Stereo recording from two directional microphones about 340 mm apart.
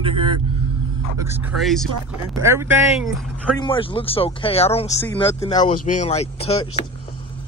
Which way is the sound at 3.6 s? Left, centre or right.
Centre.